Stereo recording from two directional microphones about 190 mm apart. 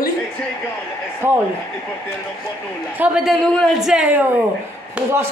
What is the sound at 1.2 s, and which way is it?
Speech, 10° right (ahead or behind).